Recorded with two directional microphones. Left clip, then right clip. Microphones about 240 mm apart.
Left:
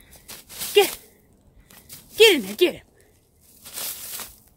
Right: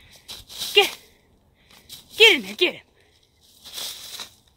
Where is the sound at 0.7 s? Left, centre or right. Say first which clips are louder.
Even; centre.